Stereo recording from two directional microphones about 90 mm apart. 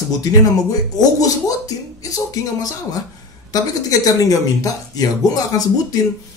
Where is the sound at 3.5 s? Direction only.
40° left (ahead or behind).